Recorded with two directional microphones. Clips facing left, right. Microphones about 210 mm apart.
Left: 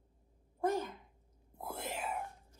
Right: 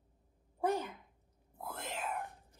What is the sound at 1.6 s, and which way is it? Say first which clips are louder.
Speech: left 1 dB; 10° left (ahead or behind).